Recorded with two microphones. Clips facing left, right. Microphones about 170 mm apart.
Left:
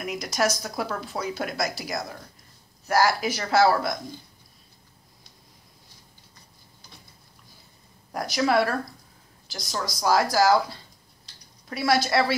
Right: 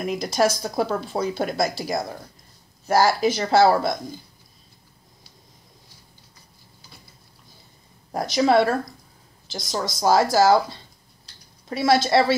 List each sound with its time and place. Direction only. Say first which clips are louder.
0.0 s speech: right 5 dB; 30° right (ahead or behind)
8.1 s speech: right 5 dB; 25° right (ahead or behind)
11.7 s speech: right 4 dB; 25° right (ahead or behind)